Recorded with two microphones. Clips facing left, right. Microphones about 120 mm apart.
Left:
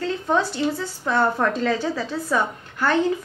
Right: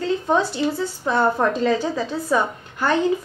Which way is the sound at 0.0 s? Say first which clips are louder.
Right 2 dB; 5° right (ahead or behind).